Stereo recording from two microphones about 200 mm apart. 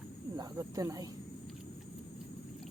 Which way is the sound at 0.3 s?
15° right (ahead or behind).